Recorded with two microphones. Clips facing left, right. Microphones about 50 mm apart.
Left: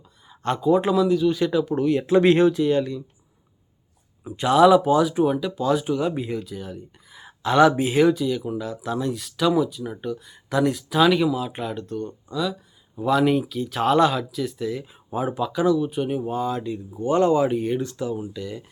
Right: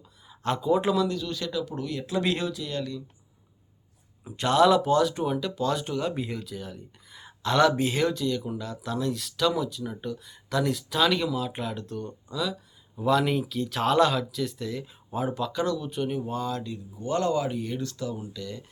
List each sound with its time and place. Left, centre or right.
0.3 s speech: centre; by 3.0 s left
4.2 s speech: centre